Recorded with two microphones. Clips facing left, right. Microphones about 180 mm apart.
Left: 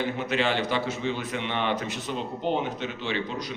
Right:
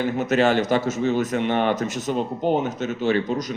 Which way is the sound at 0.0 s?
45° right (ahead or behind).